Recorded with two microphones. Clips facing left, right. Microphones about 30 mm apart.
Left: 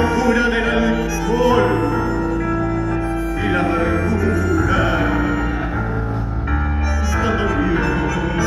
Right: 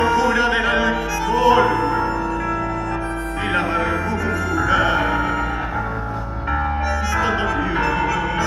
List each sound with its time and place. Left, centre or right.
0.0 s opera: centre
1.8 s music: right
3.4 s music: centre
7.2 s music: centre